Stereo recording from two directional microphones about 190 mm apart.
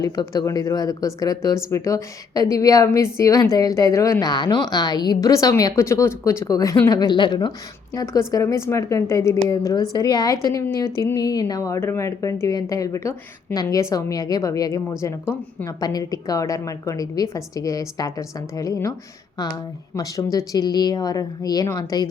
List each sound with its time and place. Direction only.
0.0 s a woman's voice: 20° left (ahead or behind)
15.6 s speech: 20° left (ahead or behind)
20.0 s speech: 20° left (ahead or behind)